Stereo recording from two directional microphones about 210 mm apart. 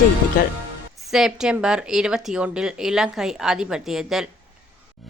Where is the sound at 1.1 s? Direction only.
Centre (ahead or behind).